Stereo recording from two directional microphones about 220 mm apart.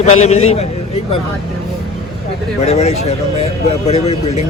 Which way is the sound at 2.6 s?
30° left (ahead or behind).